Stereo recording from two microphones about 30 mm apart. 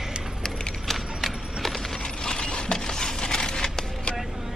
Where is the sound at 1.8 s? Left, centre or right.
Left.